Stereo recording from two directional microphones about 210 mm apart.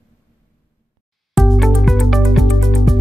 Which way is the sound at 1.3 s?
Centre (ahead or behind).